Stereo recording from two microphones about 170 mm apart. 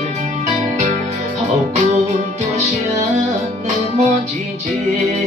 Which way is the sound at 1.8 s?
50° right (ahead or behind).